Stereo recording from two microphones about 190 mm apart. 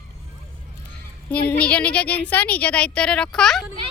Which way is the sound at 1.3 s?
5° left (ahead or behind).